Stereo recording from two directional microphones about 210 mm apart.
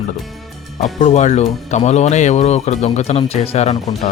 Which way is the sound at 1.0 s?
35° left (ahead or behind).